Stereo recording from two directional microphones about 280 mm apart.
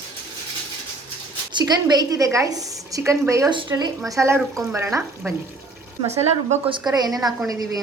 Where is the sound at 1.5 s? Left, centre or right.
Centre.